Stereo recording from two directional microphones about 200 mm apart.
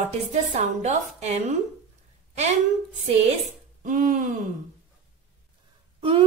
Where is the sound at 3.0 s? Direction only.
35° right (ahead or behind).